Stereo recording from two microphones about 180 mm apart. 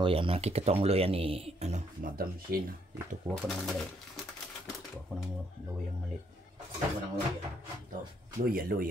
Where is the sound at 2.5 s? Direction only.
55° right (ahead or behind).